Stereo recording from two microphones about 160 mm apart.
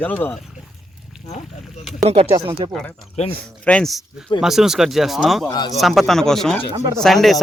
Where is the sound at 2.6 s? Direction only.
30° right (ahead or behind).